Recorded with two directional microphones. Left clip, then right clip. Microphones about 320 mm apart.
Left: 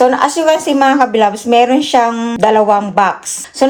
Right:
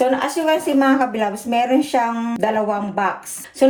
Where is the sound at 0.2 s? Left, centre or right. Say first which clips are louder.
Left 7 dB; left.